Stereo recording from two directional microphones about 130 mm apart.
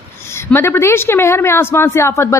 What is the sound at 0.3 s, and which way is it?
A woman's voice, 20° left (ahead or behind).